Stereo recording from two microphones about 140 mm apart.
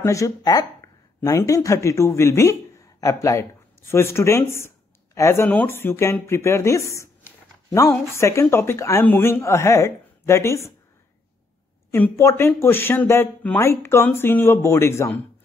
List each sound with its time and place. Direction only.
0.0 s speech: 20° left (ahead or behind)
11.9 s speech: 15° left (ahead or behind)